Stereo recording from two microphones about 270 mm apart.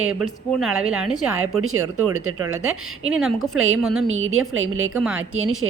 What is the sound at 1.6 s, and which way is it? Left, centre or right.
Speech, right.